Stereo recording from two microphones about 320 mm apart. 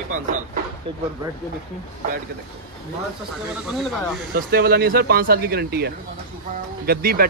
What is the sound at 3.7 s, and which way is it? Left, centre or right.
Speech, centre.